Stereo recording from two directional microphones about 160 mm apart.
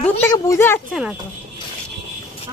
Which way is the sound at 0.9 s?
5° right (ahead or behind).